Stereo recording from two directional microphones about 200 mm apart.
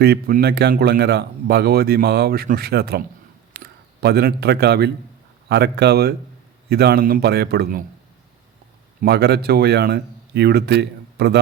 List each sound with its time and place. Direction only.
0.0 s speech: 50° right (ahead or behind)
9.0 s speech: 55° right (ahead or behind)